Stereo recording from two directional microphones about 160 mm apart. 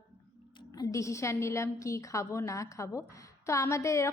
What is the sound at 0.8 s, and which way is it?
A woman's voice, 20° left (ahead or behind).